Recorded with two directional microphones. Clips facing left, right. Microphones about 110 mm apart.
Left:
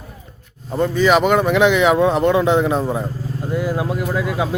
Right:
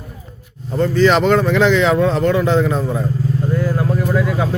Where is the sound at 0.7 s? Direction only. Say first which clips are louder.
Right 1 dB; 15° left (ahead or behind).